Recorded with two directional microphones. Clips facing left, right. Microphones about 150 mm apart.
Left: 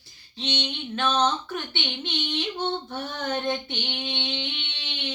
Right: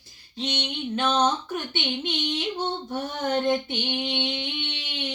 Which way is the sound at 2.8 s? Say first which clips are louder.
Right 3 dB; 10° right (ahead or behind).